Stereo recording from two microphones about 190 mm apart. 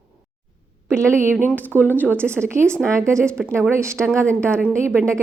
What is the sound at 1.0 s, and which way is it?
A woman's voice, 15° right (ahead or behind).